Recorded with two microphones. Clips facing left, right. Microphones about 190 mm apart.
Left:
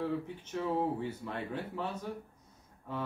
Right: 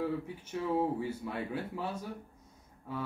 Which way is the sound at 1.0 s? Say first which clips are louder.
Right 1 dB; 10° right (ahead or behind).